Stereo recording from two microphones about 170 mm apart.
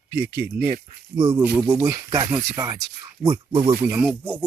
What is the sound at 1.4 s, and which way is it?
Speech, 10° right (ahead or behind).